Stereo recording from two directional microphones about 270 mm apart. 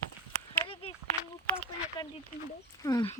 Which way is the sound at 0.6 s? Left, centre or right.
Centre.